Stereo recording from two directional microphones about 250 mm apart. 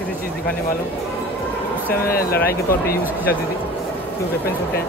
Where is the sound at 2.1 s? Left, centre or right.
Left.